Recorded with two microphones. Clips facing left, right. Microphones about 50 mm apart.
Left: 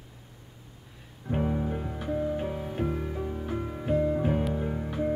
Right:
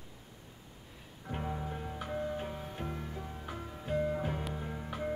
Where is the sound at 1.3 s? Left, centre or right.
Centre.